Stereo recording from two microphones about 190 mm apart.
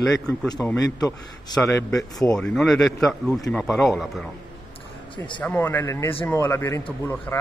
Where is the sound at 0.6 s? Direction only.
5° left (ahead or behind).